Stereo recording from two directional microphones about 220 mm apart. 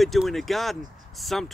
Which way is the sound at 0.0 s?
Centre (ahead or behind).